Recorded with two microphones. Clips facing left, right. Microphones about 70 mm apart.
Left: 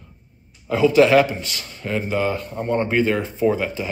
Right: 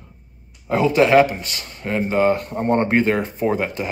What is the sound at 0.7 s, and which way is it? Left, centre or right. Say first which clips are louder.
Speech: left 1 dB; right.